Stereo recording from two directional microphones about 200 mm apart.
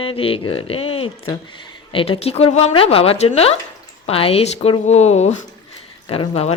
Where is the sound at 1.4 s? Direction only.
25° left (ahead or behind).